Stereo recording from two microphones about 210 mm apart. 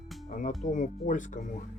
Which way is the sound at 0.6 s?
35° left (ahead or behind).